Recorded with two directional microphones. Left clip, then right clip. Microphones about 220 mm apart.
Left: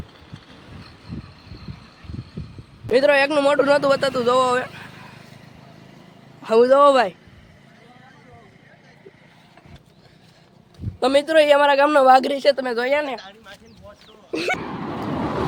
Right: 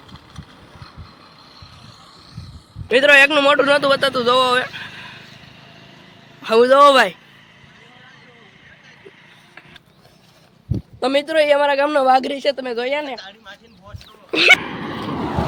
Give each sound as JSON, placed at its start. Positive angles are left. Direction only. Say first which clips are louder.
{"t": 2.9, "sound": "a man's voice", "louder": "right 5 dB", "side_deg": 0}
{"t": 4.9, "sound": "vehicle", "louder": "right 7 dB", "side_deg": 0}
{"t": 6.4, "sound": "a man's voice", "louder": "right 3 dB", "side_deg": 0}
{"t": 11.0, "sound": "a man's voice", "louder": "left 1 dB", "side_deg": -5}
{"t": 13.1, "sound": "speech", "louder": "right 1 dB", "side_deg": -35}
{"t": 14.3, "sound": "a sound", "louder": "right 12 dB", "side_deg": -5}